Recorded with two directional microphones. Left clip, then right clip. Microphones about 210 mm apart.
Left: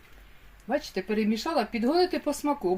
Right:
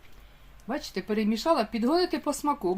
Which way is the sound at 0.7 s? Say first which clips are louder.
Left 2 dB; 45° right (ahead or behind).